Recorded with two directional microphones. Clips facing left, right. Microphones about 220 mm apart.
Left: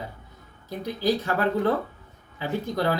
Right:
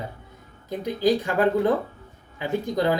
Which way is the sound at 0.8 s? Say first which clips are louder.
Right 3 dB; 15° right (ahead or behind).